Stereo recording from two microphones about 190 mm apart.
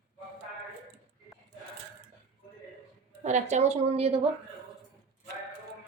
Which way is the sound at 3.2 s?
40° right (ahead or behind).